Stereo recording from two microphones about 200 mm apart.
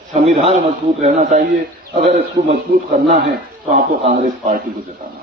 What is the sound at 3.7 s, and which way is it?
Speech, 40° right (ahead or behind).